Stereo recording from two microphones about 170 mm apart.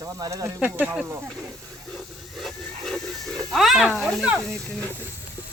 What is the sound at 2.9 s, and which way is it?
Pig, centre (ahead or behind).